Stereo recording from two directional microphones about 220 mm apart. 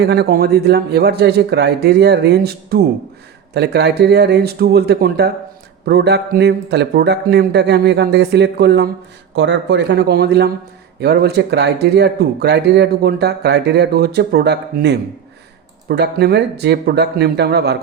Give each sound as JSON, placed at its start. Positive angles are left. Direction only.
{"t": 0.0, "sound": "speech", "side_deg": -50}